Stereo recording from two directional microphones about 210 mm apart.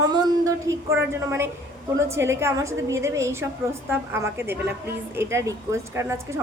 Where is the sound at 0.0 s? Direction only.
15° right (ahead or behind).